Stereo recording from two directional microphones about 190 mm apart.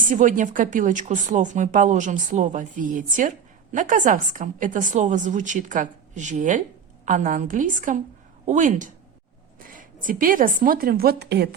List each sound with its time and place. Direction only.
0.0 s a woman's voice: 45° right (ahead or behind); by 11.4 s 60° right (ahead or behind)